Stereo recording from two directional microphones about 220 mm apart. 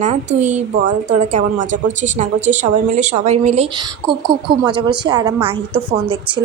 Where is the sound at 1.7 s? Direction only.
35° right (ahead or behind).